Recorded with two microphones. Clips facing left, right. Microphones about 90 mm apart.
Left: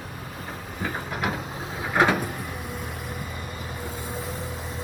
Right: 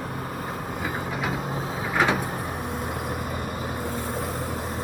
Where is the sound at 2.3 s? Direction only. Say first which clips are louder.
Right 4 dB; 45° right (ahead or behind).